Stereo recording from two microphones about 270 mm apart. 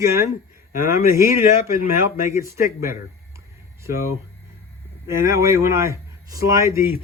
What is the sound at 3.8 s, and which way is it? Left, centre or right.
Speech, centre.